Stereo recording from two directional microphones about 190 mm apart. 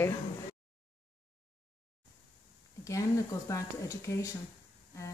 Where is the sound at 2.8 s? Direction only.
15° left (ahead or behind).